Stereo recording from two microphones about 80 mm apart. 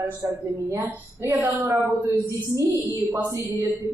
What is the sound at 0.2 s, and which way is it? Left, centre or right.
A woman's voice, right.